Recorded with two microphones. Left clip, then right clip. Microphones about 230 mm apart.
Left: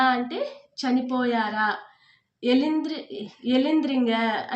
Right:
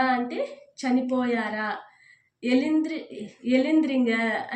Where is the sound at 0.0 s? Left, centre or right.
Centre.